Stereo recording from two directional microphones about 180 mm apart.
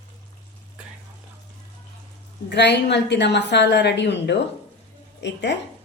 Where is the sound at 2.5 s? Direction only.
70° left (ahead or behind).